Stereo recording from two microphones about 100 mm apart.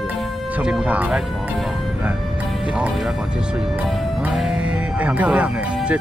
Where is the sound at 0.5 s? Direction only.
10° right (ahead or behind).